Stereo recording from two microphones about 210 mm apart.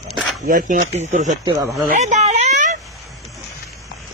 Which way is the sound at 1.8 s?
35° right (ahead or behind).